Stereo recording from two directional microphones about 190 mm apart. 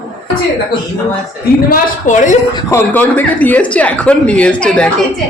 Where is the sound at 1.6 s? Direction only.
40° left (ahead or behind).